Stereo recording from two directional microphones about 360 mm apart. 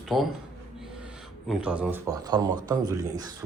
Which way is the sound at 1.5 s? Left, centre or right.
Centre.